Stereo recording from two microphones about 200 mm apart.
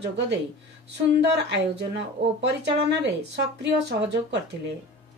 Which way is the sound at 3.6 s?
60° right (ahead or behind).